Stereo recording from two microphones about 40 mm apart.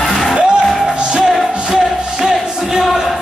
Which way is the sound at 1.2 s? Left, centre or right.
Centre.